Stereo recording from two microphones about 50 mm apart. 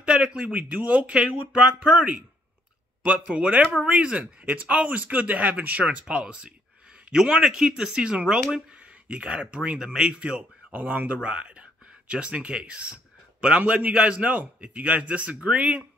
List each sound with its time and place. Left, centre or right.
0.0 s a man's voice: right
3.3 s a man's voice: right
8.4 s speech: centre
9.1 s a man's voice: right
10.7 s speech: right
11.2 s a man's voice: right